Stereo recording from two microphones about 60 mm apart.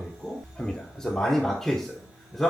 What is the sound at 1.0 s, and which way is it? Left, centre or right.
Speech, centre.